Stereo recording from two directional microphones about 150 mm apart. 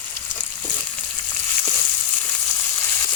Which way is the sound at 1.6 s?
10° left (ahead or behind).